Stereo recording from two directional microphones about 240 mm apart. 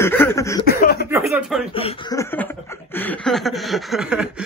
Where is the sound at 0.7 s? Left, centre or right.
Left.